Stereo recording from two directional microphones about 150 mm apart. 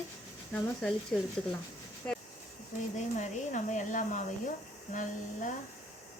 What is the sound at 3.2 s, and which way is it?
Speech, 55° left (ahead or behind).